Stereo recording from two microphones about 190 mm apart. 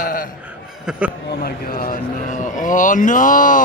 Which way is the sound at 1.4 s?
45° left (ahead or behind).